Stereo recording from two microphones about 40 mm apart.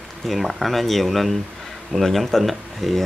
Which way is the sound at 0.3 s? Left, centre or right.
Centre.